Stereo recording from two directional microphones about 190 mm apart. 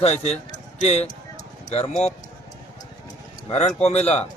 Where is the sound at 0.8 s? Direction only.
35° left (ahead or behind).